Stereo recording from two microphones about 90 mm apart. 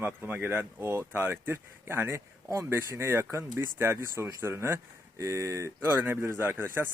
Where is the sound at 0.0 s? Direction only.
20° right (ahead or behind).